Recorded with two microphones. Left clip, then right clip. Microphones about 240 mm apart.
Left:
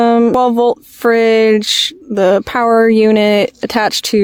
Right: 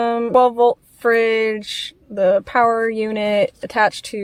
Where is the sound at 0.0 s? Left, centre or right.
Left.